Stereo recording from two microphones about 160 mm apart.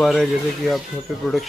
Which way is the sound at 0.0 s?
Centre (ahead or behind).